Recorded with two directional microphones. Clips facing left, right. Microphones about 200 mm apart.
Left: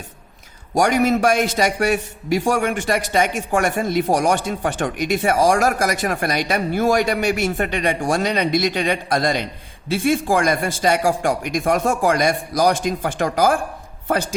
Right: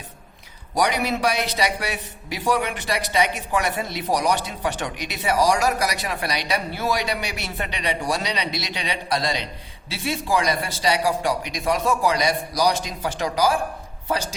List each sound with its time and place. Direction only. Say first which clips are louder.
0.7 s a man's voice: left 6 dB; 45° left (ahead or behind)